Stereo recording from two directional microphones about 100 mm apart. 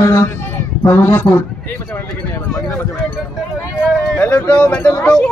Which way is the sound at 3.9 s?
5° left (ahead or behind).